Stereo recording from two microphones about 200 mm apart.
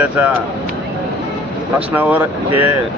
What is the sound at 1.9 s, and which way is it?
Speech, 10° right (ahead or behind).